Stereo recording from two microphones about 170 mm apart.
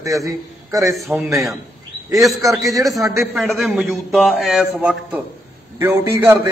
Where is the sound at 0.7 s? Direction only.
20° right (ahead or behind).